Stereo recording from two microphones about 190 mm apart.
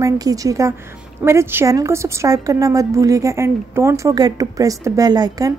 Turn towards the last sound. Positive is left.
turn(degrees=-20)  # may be behind; listen again after turning